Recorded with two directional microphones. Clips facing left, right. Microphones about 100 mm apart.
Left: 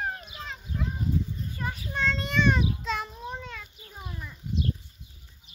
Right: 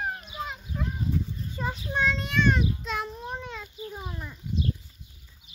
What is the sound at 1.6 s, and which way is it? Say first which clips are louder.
Child singing: right 4 dB; 20° right (ahead or behind).